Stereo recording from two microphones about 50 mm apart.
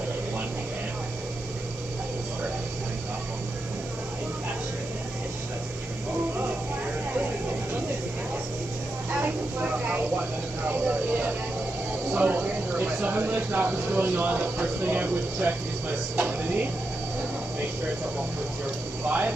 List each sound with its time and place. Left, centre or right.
9.6 s vehicle: right
12.1 s a sound: right
19.0 s speech: right